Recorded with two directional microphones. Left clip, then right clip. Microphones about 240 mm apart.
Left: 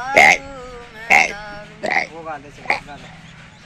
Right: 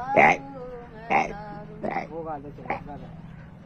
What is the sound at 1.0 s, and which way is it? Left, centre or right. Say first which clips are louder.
Music: left 10 dB; left.